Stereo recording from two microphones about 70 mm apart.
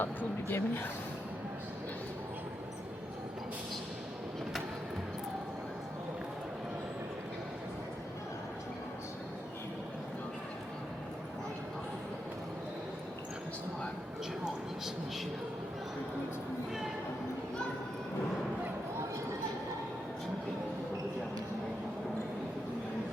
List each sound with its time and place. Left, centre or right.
0.0 s speech: left